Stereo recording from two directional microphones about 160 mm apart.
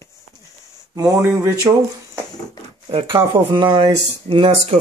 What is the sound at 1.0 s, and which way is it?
Speech, 20° right (ahead or behind).